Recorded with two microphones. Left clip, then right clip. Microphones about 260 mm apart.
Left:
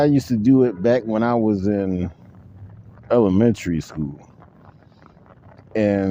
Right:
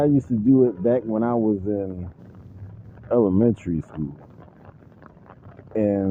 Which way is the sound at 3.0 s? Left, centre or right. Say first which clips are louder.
Left 3 dB; left.